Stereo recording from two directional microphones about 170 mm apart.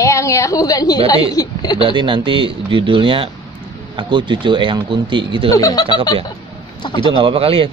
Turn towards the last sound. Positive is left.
turn(degrees=-35)  # may be behind; listen again after turning